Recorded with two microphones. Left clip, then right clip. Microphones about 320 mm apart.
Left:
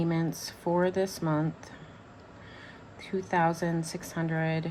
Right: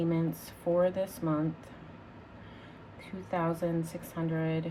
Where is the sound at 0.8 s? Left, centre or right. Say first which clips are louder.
Left 1 dB; left.